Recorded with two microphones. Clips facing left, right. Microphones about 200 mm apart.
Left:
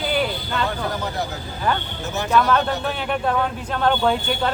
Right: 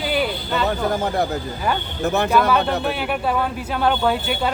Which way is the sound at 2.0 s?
60° right (ahead or behind).